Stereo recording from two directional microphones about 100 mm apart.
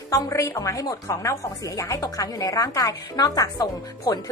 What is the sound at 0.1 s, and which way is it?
A woman's voice, 35° left (ahead or behind).